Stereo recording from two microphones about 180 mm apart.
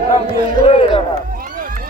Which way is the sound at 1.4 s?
50° right (ahead or behind).